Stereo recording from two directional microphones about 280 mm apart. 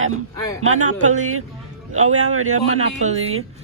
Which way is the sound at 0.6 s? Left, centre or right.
Right.